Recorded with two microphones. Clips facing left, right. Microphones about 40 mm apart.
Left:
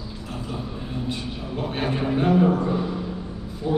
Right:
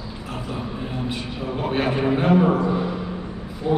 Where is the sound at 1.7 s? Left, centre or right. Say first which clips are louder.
Right 3 dB; right.